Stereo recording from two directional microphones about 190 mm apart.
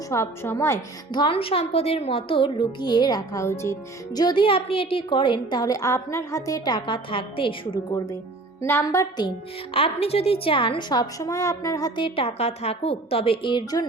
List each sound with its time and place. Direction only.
0.1 s a woman's voice: 15° left (ahead or behind)
9.7 s a woman's voice: 30° left (ahead or behind)